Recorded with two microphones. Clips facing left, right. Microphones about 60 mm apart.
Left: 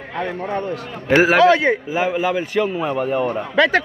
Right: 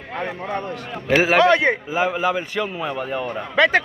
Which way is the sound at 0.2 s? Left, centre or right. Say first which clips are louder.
Left 3 dB; centre.